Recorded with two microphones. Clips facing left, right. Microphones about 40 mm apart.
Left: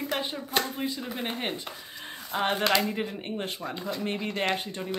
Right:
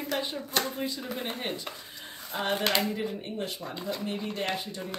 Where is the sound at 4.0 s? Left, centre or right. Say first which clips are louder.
Left 2 dB; left.